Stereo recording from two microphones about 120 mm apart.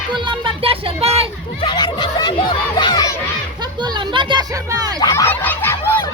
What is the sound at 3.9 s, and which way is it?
Music, 40° right (ahead or behind).